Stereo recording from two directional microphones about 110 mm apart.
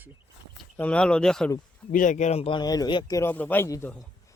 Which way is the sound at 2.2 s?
80° left.